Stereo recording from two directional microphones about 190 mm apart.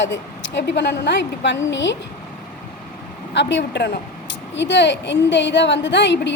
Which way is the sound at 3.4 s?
70° left (ahead or behind).